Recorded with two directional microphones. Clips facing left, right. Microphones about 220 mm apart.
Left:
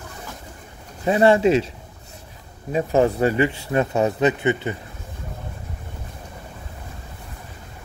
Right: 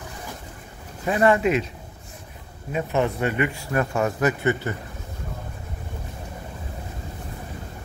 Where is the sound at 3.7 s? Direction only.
20° left (ahead or behind).